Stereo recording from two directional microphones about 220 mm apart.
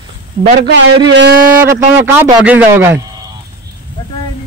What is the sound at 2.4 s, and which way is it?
Speech, 5° right (ahead or behind).